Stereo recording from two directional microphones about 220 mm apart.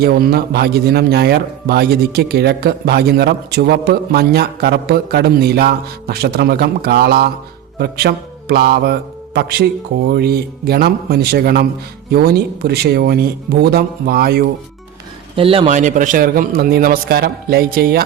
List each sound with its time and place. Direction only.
0.0 s a man's voice: 45° right (ahead or behind)
7.8 s mantra: 45° right (ahead or behind)
10.2 s a man's voice: 45° right (ahead or behind)
15.4 s a man's voice: 25° right (ahead or behind); by 18.0 s 45° right (ahead or behind)